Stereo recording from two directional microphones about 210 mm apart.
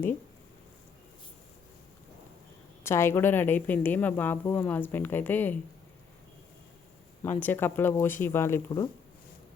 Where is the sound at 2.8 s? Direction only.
10° left (ahead or behind).